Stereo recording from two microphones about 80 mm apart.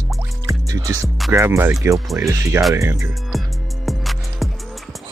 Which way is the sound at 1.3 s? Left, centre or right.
Right.